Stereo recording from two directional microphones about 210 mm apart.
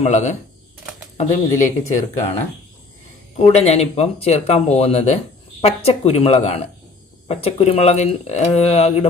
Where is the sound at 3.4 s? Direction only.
30° left (ahead or behind).